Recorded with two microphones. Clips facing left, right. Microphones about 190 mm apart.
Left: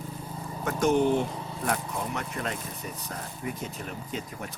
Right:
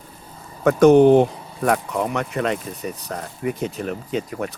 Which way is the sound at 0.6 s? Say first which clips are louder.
Right 12 dB; 80° right.